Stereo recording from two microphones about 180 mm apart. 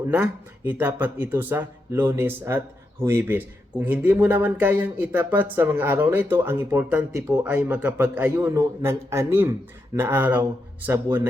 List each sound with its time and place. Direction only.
0.1 s speech: 10° right (ahead or behind)
8.4 s speech: 20° right (ahead or behind)